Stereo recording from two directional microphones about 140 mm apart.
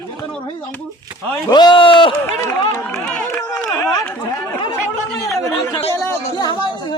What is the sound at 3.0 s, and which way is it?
Speech, 5° left (ahead or behind).